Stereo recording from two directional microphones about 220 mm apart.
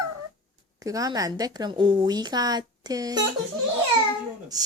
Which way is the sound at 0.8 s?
15° right (ahead or behind).